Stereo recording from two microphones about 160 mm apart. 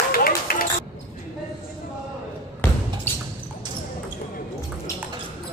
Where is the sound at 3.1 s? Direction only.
10° left (ahead or behind).